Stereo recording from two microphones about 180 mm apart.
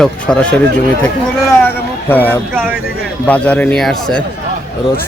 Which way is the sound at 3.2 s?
10° left (ahead or behind).